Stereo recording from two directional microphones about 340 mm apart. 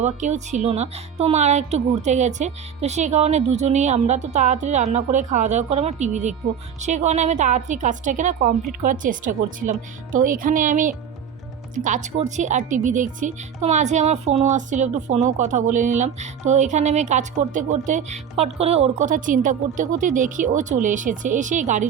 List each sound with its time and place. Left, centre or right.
0.0 s speech: right